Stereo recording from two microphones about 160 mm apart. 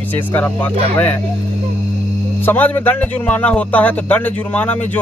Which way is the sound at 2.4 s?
10° left (ahead or behind).